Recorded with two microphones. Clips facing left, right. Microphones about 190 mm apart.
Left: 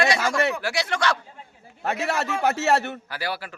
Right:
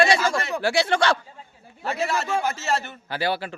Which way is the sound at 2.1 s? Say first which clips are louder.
Left 4 dB; 65° left (ahead or behind).